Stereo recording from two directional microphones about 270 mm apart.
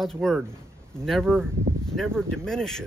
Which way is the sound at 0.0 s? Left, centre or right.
Centre.